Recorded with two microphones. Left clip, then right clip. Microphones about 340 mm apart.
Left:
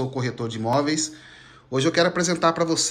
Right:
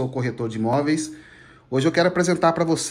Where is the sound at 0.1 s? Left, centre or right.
Centre.